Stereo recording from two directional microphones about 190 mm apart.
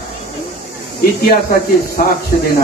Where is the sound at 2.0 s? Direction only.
45° left (ahead or behind).